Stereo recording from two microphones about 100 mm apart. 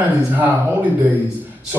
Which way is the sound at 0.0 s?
15° right (ahead or behind).